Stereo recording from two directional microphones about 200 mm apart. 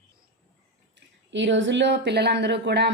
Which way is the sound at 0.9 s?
65° right (ahead or behind).